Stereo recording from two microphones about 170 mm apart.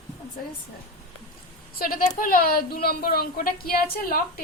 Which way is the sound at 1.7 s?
55° left (ahead or behind).